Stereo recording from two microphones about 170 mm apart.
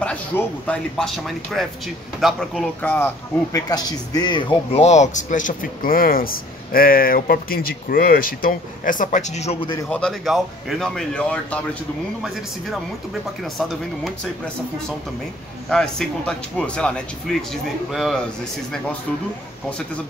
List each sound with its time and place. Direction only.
0.7 s speech: 5° left (ahead or behind)
3.5 s speech: 25° left (ahead or behind)
4.8 s speech: 45° left (ahead or behind)
9.8 s speech: 5° left (ahead or behind)
15.7 s speech: 5° left (ahead or behind)